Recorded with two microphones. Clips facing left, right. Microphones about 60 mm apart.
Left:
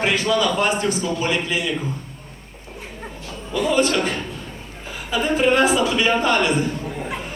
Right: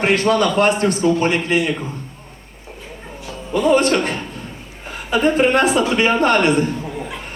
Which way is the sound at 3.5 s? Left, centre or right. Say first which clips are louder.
Right 4 dB; right.